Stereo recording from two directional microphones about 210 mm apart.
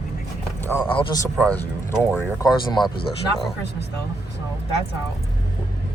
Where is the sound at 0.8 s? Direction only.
20° left (ahead or behind).